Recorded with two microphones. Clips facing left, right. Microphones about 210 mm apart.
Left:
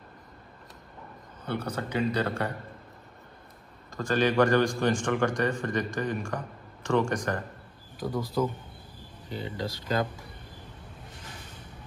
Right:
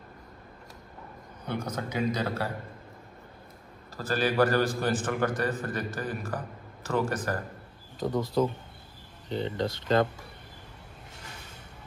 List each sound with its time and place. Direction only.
1.4 s a sound: 10° right (ahead or behind)
1.8 s a man's voice: 10° right (ahead or behind)
3.9 s a man's voice: 5° right (ahead or behind)
8.0 s speech: 25° right (ahead or behind)